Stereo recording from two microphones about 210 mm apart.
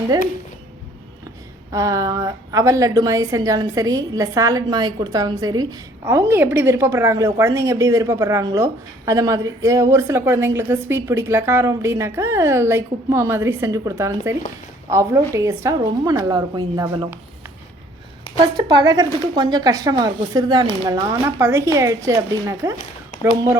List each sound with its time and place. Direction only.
1.7 s a woman's voice: 15° right (ahead or behind)
18.3 s a woman's voice: 20° right (ahead or behind)